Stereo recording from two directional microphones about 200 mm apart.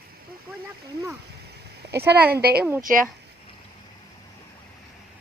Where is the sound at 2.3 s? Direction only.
50° right (ahead or behind).